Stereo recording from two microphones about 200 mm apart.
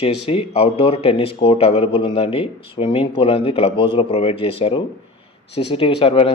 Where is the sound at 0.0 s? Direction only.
30° left (ahead or behind).